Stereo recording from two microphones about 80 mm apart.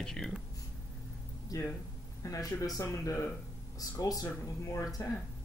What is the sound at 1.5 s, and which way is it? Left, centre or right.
Speech, left.